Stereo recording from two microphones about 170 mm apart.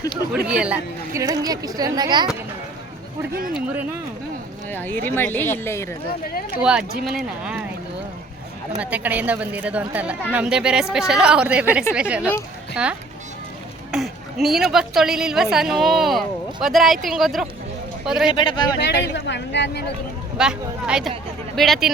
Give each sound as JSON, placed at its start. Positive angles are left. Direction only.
{"t": 0.4, "sound": "a woman's voice", "side_deg": -5}
{"t": 1.2, "sound": "speech", "side_deg": -20}
{"t": 3.5, "sound": "a woman's voice", "side_deg": -10}
{"t": 4.7, "sound": "a woman's voice", "side_deg": 10}
{"t": 6.6, "sound": "a woman's voice", "side_deg": -5}
{"t": 8.8, "sound": "a woman's voice", "side_deg": -10}
{"t": 18.3, "sound": "speech", "side_deg": 25}
{"t": 18.8, "sound": "speech", "side_deg": 90}
{"t": 20.4, "sound": "a woman's voice", "side_deg": -5}